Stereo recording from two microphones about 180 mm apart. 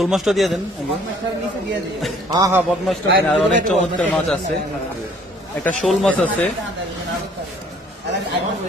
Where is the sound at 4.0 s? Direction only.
5° left (ahead or behind).